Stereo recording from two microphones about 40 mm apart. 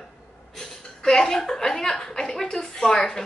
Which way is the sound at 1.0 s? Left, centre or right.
Centre.